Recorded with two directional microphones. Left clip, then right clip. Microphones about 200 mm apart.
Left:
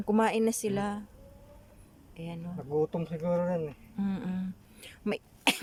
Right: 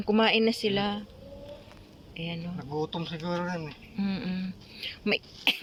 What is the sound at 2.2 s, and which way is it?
Speech, 5° left (ahead or behind).